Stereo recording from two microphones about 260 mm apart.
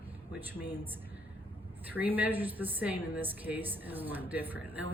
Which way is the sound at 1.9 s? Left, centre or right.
Centre.